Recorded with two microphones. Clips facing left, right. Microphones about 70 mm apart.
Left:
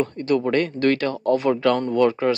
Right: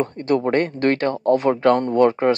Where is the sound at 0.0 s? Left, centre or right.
Right.